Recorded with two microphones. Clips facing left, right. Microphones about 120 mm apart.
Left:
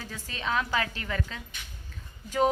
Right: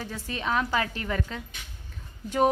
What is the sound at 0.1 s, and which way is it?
A woman's voice, 20° right (ahead or behind).